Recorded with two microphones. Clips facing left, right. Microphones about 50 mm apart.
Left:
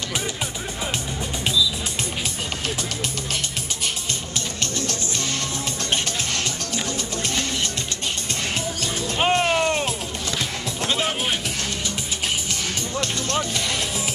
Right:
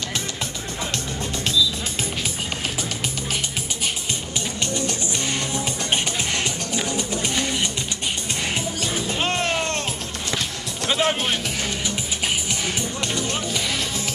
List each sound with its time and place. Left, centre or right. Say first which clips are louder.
6.7 s music: right 2 dB; centre
9.2 s a sound: left 6 dB; centre
10.9 s music: right 4 dB; centre
13.0 s music: even; centre